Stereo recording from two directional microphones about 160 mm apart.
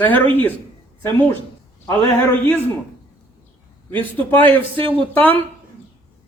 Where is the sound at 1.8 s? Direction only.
15° left (ahead or behind).